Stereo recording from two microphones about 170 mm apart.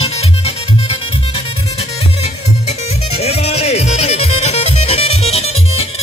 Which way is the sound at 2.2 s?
40° left (ahead or behind).